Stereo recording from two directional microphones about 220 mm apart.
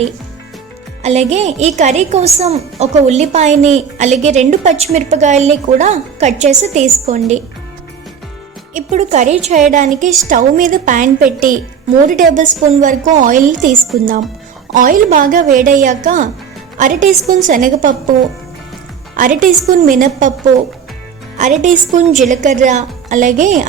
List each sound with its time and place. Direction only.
1.0 s a woman's voice: 30° right (ahead or behind)
8.7 s a woman's voice: 30° right (ahead or behind)
19.1 s a woman's voice: 35° right (ahead or behind)
21.3 s a woman's voice: 35° right (ahead or behind)